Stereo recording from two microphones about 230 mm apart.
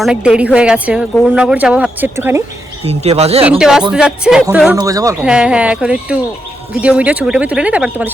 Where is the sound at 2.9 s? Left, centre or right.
Right.